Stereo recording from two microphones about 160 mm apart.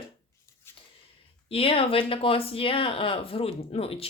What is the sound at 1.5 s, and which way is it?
Speech, 35° left (ahead or behind).